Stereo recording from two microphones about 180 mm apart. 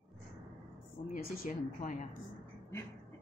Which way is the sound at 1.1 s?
45° left (ahead or behind).